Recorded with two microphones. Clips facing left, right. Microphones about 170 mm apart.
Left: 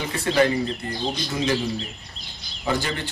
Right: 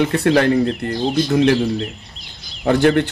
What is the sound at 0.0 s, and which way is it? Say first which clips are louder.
Speech: right 6 dB; 65° right (ahead or behind).